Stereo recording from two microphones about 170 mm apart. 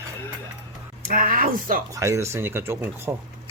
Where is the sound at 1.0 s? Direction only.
60° right (ahead or behind).